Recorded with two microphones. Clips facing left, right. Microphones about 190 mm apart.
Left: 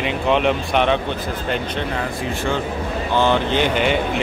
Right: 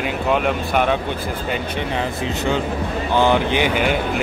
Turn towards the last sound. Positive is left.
turn(degrees=-5)  # may be behind; listen again after turning